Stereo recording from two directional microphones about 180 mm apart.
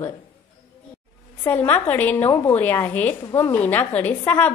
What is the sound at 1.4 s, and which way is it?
A woman's voice, 10° left (ahead or behind).